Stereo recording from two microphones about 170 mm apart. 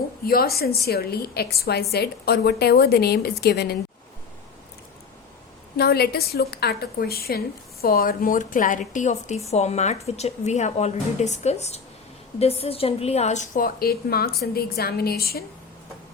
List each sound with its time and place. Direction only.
0.3 s a woman's voice: 65° left (ahead or behind)
5.7 s a woman's voice: 70° left (ahead or behind)